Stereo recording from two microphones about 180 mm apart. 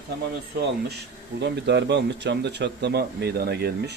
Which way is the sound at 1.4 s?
70° right (ahead or behind).